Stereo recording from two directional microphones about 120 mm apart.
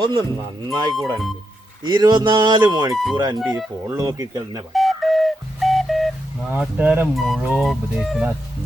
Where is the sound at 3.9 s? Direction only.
25° right (ahead or behind).